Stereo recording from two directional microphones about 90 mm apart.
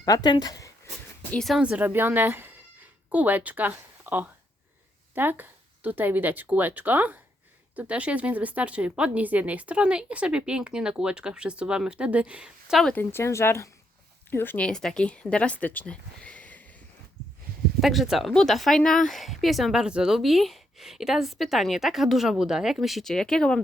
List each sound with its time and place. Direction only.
0.0 s speech: 45° left (ahead or behind)
1.6 s a woman's voice: 15° right (ahead or behind)
13.0 s a woman's voice: 25° left (ahead or behind)
14.6 s speech: 5° left (ahead or behind)
17.7 s speech: centre (ahead or behind)